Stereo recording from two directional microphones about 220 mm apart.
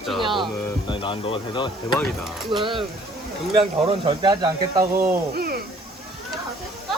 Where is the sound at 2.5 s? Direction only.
20° right (ahead or behind).